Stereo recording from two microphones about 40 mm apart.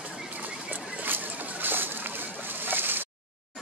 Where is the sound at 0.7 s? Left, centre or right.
Right.